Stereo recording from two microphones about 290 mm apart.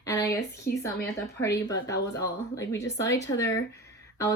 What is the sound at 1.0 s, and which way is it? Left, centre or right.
Speech, centre.